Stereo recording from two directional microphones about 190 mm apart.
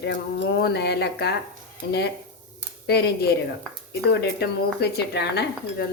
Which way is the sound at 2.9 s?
60° left (ahead or behind).